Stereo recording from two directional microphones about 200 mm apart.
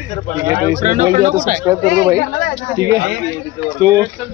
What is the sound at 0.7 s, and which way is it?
Speech, 40° right (ahead or behind).